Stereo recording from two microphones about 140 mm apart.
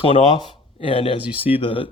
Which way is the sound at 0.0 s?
40° left (ahead or behind).